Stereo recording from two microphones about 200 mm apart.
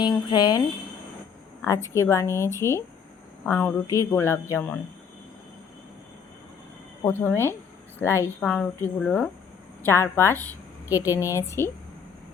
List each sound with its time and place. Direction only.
0.0 s speech: 20° left (ahead or behind)
1.6 s a woman's voice: 15° left (ahead or behind)
7.0 s a woman's voice: 10° left (ahead or behind)